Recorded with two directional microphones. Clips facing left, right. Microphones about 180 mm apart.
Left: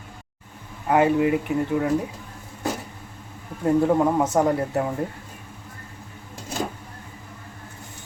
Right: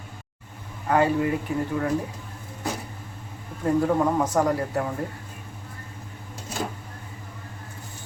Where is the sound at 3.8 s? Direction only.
20° left (ahead or behind).